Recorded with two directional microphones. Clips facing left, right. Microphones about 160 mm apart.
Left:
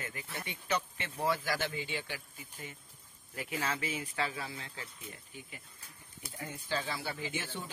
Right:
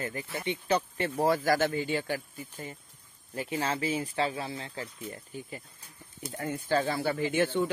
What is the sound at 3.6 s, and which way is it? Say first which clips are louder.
Speech: right 6 dB; 30° right (ahead or behind).